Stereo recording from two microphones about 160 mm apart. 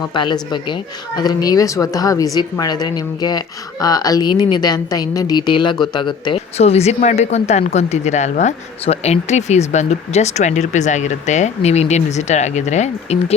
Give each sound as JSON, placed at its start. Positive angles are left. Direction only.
{"t": 0.1, "sound": "a woman's voice", "side_deg": 30}